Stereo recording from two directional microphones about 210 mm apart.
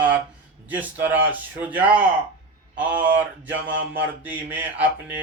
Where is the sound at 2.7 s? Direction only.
5° right (ahead or behind).